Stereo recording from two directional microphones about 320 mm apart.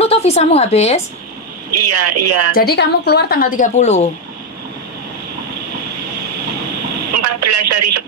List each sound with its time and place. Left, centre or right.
0.0 s a woman's voice: centre
1.7 s speech: right
2.5 s speech: left
7.1 s a sound: right